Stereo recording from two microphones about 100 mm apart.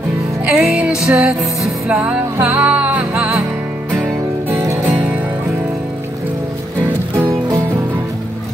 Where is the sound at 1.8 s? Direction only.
15° right (ahead or behind).